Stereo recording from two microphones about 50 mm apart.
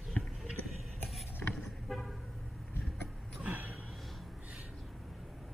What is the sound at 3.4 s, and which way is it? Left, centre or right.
Gasp, right.